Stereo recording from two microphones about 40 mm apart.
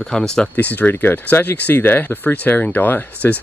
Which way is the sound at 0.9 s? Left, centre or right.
Left.